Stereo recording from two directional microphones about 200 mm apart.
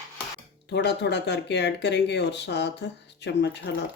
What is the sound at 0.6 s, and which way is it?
Speech, 60° left (ahead or behind).